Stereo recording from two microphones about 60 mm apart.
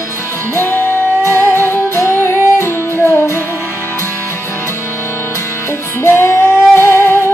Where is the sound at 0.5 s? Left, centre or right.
Left.